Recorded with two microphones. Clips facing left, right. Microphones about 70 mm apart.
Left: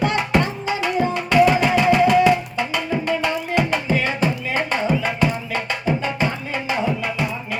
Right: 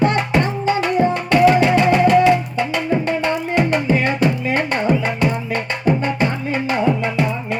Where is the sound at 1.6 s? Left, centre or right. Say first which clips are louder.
Right 2 dB; centre.